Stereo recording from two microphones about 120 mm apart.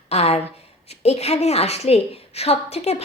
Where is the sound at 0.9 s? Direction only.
60° left (ahead or behind).